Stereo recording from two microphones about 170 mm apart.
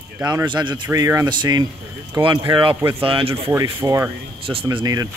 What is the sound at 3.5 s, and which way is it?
Speech, 15° right (ahead or behind).